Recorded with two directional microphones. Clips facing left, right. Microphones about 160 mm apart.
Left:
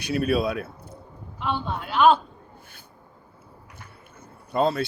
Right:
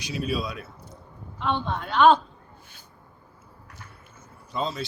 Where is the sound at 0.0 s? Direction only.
60° left (ahead or behind).